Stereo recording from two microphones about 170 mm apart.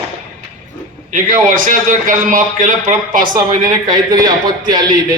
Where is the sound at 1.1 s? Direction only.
55° right (ahead or behind).